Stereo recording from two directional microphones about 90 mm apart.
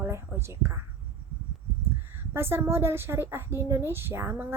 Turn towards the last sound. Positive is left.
turn(degrees=-30)  # may be behind; listen again after turning